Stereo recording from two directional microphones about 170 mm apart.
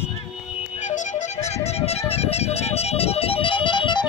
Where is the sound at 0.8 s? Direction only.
40° left (ahead or behind).